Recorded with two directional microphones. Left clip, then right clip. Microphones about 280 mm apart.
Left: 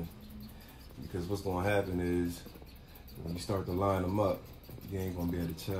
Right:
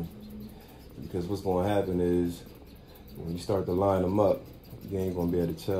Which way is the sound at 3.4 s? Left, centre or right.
Left.